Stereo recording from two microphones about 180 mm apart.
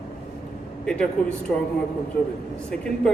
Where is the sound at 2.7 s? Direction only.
5° left (ahead or behind).